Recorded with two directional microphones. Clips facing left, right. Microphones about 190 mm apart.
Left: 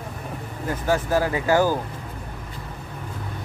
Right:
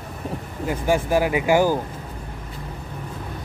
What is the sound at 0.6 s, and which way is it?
Speech, 15° right (ahead or behind).